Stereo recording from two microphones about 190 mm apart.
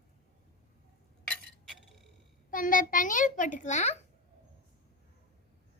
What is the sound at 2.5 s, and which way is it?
A child's voice, 45° left (ahead or behind).